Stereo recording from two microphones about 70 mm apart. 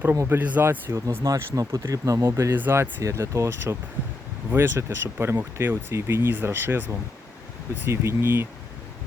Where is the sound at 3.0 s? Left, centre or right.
Right.